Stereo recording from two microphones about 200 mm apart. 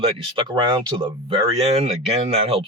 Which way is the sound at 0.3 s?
20° right (ahead or behind).